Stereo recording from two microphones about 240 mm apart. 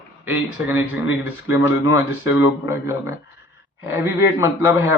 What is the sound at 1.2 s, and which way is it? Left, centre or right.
A man's voice, centre.